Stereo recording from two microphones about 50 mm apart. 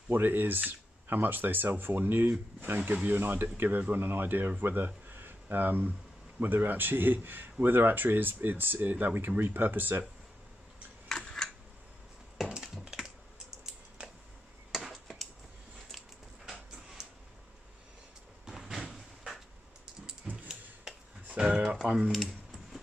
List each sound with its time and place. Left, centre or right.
0.1 s speech: right
11.1 s a sound: centre
12.4 s wood: centre
13.7 s typing: centre
18.4 s vehicle: centre
21.4 s a sound: centre
22.1 s typing: centre